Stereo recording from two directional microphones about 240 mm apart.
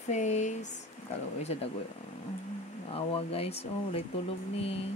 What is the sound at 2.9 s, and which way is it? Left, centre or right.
Speech, left.